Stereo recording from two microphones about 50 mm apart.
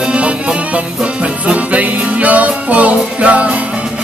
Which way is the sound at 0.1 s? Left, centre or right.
Right.